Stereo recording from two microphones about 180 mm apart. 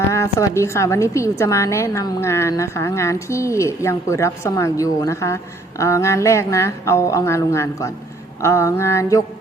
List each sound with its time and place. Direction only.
0.1 s a woman's voice: 15° left (ahead or behind)